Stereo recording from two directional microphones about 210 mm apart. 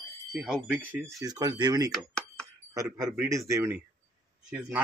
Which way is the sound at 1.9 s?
5° left (ahead or behind).